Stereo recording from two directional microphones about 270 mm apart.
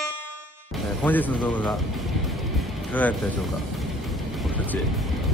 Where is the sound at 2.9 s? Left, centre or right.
Centre.